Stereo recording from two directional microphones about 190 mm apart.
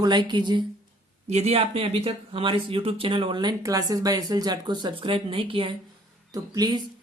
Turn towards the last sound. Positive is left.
turn(degrees=-20)  # may be behind; listen again after turning